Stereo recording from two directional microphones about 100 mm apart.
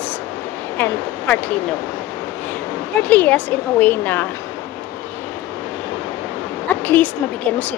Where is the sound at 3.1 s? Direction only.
15° left (ahead or behind).